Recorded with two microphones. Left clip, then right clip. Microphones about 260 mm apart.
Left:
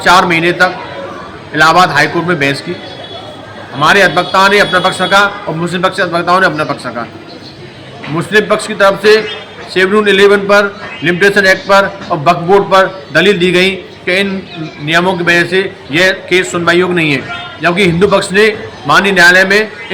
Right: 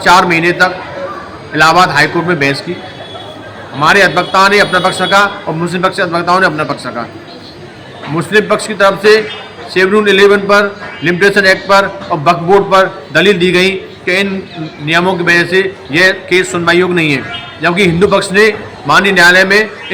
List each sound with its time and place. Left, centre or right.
0.0 s a man's voice: centre
3.8 s a man's voice: centre
8.1 s a man's voice: centre